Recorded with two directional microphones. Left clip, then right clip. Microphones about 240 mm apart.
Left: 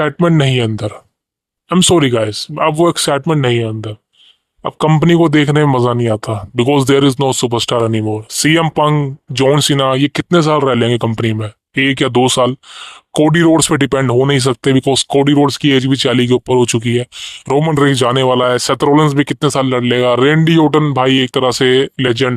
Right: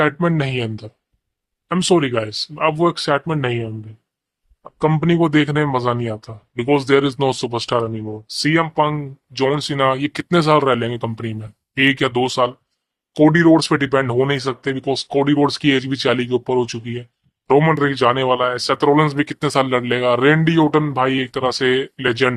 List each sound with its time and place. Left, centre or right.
0.2 s speech: left
4.9 s speech: left